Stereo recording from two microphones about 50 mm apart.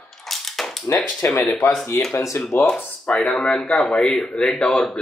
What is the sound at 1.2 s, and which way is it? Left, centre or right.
Speech, left.